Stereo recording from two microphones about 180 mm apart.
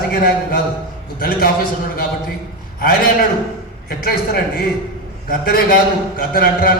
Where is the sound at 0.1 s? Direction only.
55° left (ahead or behind).